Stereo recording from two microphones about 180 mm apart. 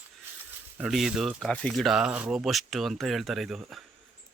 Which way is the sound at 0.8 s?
Centre (ahead or behind).